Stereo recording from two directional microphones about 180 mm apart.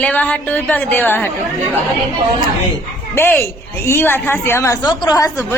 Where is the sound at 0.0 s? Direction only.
10° left (ahead or behind).